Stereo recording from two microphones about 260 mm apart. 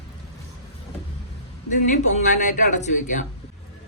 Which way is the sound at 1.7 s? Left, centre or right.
Left.